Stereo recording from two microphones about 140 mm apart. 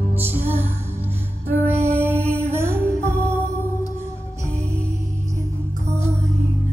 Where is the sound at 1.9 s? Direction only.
15° right (ahead or behind).